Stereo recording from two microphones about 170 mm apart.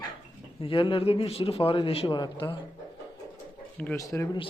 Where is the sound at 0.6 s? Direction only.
30° left (ahead or behind).